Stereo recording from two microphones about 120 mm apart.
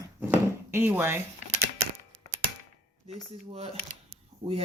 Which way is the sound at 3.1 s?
60° right (ahead or behind).